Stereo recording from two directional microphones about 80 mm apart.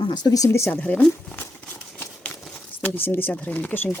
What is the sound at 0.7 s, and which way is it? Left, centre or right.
Speech, centre.